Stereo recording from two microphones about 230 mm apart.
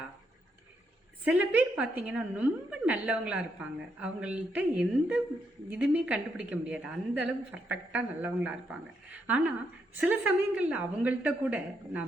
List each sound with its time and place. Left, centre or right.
1.2 s a woman's voice: centre